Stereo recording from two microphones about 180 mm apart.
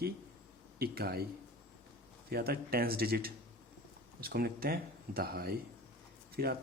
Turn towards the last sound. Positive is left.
turn(degrees=-55)  # may be behind; listen again after turning